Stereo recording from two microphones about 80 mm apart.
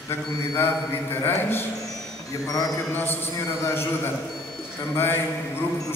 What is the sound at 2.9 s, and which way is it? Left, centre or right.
Speech, left.